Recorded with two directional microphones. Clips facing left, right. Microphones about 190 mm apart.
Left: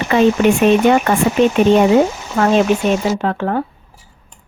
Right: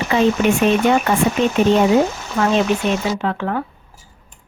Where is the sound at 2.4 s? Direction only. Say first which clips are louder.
Left 3 dB; 50° left (ahead or behind).